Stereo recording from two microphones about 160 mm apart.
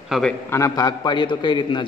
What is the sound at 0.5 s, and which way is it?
A man's voice, 20° left (ahead or behind).